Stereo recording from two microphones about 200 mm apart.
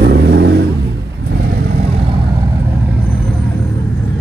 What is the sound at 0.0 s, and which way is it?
Vehicle, 55° right (ahead or behind).